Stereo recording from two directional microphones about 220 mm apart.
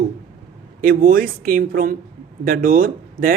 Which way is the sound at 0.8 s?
40° right (ahead or behind).